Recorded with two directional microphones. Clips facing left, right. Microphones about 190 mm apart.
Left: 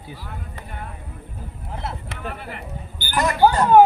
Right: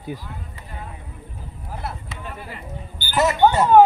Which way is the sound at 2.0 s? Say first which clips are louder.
Left 3 dB; 60° left (ahead or behind).